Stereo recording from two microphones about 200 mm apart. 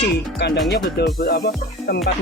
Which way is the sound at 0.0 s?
60° left (ahead or behind).